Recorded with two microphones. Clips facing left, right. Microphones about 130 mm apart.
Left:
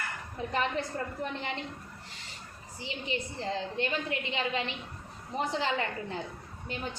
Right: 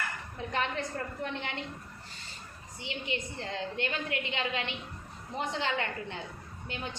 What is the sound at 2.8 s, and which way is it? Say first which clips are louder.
A woman's voice: left 1 dB; 35° left (ahead or behind).